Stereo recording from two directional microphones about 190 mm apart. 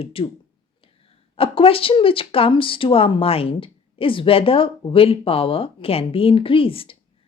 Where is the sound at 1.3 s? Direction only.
30° left (ahead or behind).